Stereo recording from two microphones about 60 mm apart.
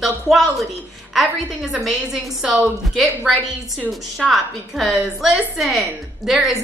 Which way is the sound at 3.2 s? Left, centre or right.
Centre.